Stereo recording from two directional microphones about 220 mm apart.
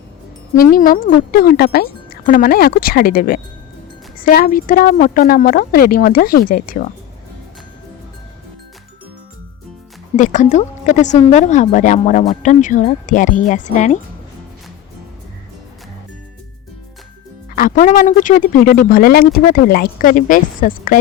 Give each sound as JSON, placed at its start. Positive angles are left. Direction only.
{"t": 0.6, "sound": "speech", "side_deg": 40}
{"t": 10.2, "sound": "speech", "side_deg": 35}
{"t": 17.5, "sound": "speech", "side_deg": 40}